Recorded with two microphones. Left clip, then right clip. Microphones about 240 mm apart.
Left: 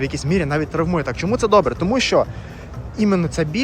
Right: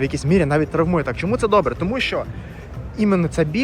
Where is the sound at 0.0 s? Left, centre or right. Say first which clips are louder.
Right 2 dB; centre.